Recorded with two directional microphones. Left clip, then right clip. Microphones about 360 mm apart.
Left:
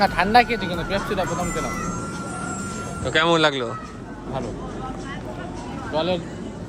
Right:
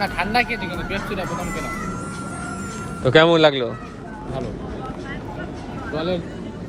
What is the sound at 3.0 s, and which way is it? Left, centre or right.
Speech, centre.